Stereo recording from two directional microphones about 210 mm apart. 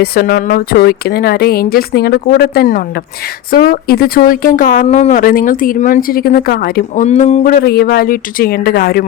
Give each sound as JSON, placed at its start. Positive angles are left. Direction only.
{"t": 0.0, "sound": "speech", "side_deg": 45}